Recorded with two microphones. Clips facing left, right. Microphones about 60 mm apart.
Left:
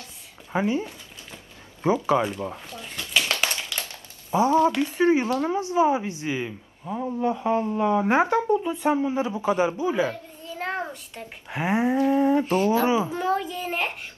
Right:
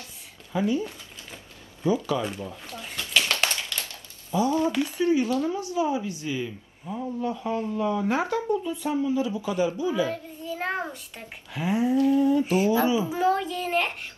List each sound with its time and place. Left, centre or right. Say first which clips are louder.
0.5 s speech: left 1 dB; left
3.0 s a sound: even; centre
4.4 s speech: left 4 dB; left
10.6 s a sound: left 1 dB; centre
11.5 s speech: left 1 dB; left
13.1 s a child's voice: right 1 dB; centre